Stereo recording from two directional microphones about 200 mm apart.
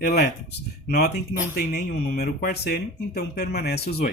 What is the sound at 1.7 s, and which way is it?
Speech, 50° left (ahead or behind).